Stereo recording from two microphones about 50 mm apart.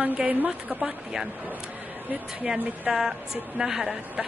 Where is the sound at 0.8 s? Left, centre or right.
Centre.